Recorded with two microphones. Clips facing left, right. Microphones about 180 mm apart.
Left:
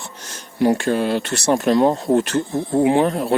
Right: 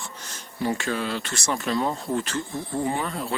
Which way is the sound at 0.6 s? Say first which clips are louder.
Left 10 dB; 70° left (ahead or behind).